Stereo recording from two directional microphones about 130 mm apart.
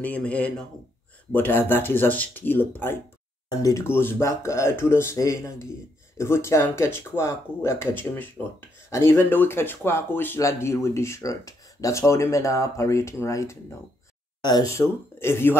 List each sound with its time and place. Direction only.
0.0 s speech: 10° left (ahead or behind)
3.4 s speech: 25° left (ahead or behind)